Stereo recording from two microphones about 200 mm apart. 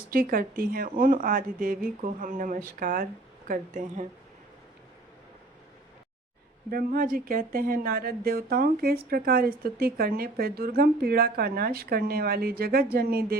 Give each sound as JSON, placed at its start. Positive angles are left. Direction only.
{"t": 0.1, "sound": "speech", "side_deg": -45}
{"t": 6.7, "sound": "speech", "side_deg": -45}